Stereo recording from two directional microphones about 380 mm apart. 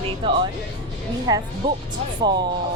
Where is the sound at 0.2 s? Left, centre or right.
Centre.